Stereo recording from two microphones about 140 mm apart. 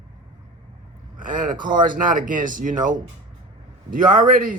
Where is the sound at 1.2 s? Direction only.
75° right (ahead or behind).